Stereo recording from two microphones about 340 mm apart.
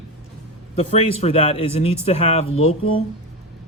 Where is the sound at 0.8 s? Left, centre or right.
Centre.